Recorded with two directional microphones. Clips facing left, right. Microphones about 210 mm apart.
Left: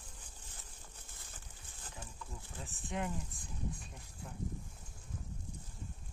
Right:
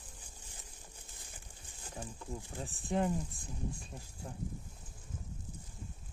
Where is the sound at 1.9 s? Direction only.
35° right (ahead or behind).